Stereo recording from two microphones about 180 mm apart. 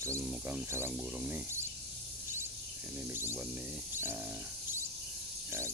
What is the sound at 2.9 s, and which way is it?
Speech, 10° right (ahead or behind).